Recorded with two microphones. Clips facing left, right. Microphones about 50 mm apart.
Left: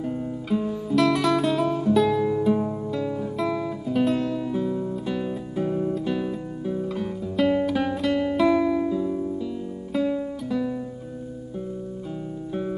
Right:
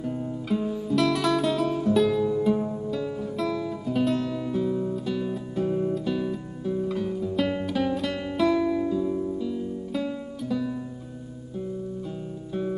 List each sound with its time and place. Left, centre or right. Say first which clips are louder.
0.5 s music: left 1 dB; centre
2.5 s music: left 2 dB; centre
3.9 s music: left 2 dB; centre
8.5 s music: right 1 dB; centre